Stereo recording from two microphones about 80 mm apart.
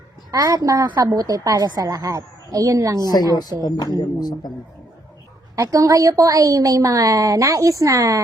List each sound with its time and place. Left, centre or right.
0.3 s a woman's voice: right
3.6 s speech: left
5.5 s a woman's voice: right